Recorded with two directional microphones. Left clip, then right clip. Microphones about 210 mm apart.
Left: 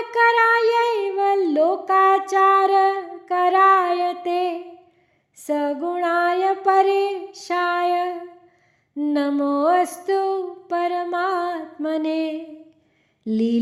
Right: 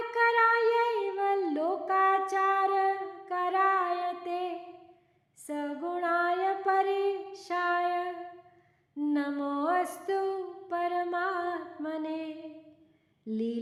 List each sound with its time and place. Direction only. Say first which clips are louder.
0.1 s child singing: left 9 dB; 40° left (ahead or behind)
5.4 s female singing: left 13 dB; 40° left (ahead or behind)
9.1 s music: left 12 dB; 40° left (ahead or behind)
13.2 s speech: left 11 dB; 40° left (ahead or behind)